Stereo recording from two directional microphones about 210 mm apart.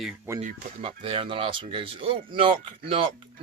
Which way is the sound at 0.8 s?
25° right (ahead or behind).